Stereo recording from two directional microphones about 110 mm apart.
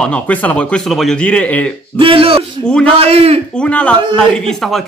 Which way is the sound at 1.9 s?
55° right (ahead or behind).